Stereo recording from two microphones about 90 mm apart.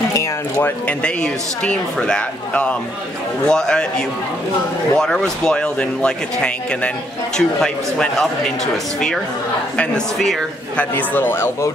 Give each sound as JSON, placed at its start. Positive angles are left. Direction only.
{"t": 0.1, "sound": "speech", "side_deg": 30}
{"t": 0.8, "sound": "speech", "side_deg": 10}
{"t": 4.9, "sound": "speech", "side_deg": 5}
{"t": 9.8, "sound": "speech", "side_deg": 5}
{"t": 10.8, "sound": "a man's voice", "side_deg": 20}